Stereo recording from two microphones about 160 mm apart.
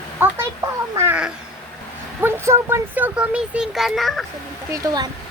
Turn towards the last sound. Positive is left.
turn(degrees=-25)  # may be behind; listen again after turning